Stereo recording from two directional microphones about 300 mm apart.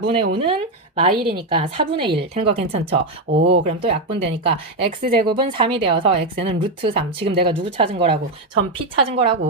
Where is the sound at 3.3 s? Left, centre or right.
Centre.